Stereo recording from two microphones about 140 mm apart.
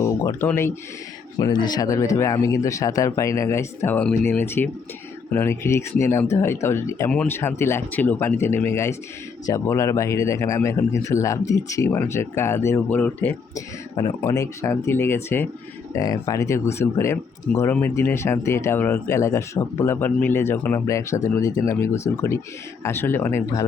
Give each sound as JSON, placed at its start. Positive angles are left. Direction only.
{"t": 0.3, "sound": "speech", "side_deg": 15}
{"t": 1.4, "sound": "speech", "side_deg": 30}
{"t": 14.3, "sound": "speech", "side_deg": 20}